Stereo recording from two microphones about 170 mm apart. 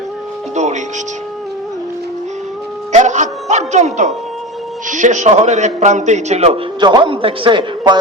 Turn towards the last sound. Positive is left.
turn(degrees=-30)  # may be behind; listen again after turning